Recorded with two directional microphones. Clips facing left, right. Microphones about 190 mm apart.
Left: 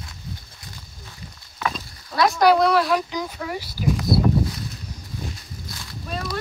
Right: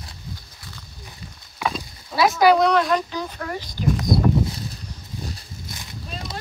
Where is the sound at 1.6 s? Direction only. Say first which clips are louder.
Right 1 dB; 10° right (ahead or behind); by 3.1 s 5° left (ahead or behind).